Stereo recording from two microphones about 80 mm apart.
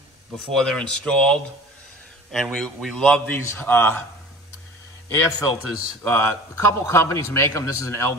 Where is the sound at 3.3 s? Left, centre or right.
Left.